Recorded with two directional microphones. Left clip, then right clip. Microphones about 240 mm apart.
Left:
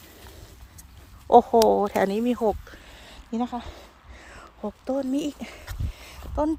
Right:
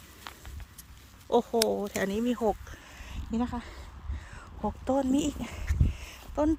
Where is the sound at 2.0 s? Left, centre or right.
Centre.